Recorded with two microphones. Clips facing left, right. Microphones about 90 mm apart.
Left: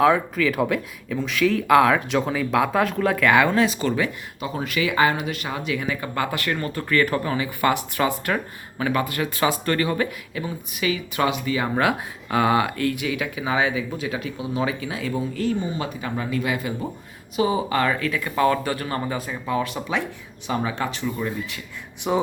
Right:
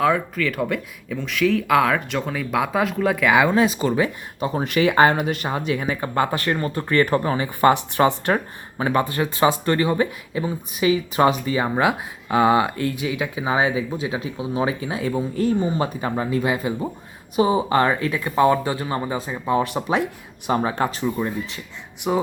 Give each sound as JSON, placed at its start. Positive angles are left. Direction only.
{"t": 0.0, "sound": "speech", "side_deg": 5}
{"t": 3.6, "sound": "speech", "side_deg": -25}
{"t": 19.6, "sound": "speech", "side_deg": -40}
{"t": 22.0, "sound": "speech", "side_deg": 0}